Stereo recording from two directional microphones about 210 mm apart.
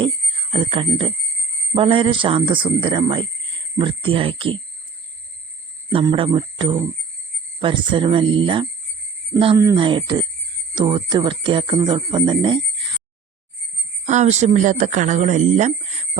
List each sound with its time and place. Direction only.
0.5 s speech: 25° right (ahead or behind)
5.9 s speech: 25° right (ahead or behind)
14.1 s speech: 35° right (ahead or behind)